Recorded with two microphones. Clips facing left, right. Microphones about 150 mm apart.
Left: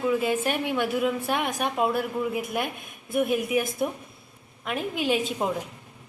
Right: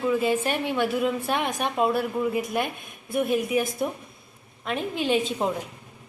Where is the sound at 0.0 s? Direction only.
5° left (ahead or behind).